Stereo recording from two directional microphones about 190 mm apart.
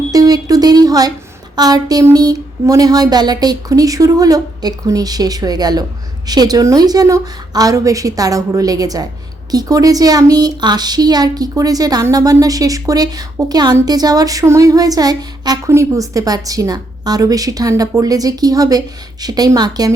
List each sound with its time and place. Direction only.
0.1 s a woman's voice: 20° right (ahead or behind)